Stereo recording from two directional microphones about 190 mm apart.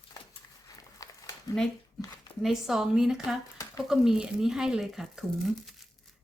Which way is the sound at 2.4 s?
Centre (ahead or behind).